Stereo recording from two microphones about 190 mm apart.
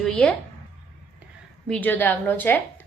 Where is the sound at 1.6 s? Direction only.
5° left (ahead or behind).